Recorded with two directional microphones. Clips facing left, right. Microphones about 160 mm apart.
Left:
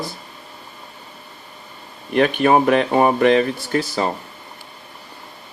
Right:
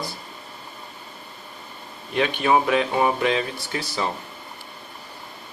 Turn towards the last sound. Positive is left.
turn(degrees=50)  # may be behind; listen again after turning